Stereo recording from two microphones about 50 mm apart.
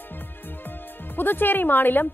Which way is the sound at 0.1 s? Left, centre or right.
Left.